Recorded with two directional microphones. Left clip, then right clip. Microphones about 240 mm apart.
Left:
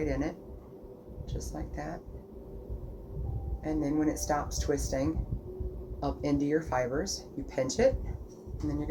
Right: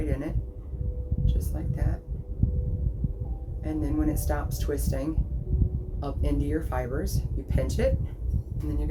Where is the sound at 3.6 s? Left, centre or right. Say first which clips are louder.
Even; centre.